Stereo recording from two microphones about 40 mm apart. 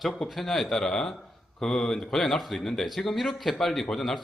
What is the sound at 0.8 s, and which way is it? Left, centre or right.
A man's voice, centre.